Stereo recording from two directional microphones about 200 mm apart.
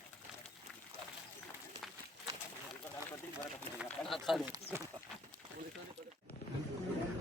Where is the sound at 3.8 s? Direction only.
Centre (ahead or behind).